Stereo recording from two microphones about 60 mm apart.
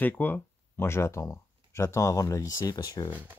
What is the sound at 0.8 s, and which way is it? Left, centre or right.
Speech, left.